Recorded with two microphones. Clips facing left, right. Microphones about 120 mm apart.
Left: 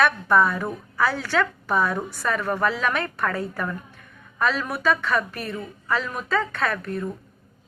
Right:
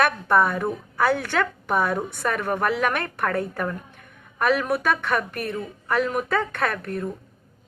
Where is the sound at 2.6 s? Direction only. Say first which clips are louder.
Right 1 dB; 55° right (ahead or behind).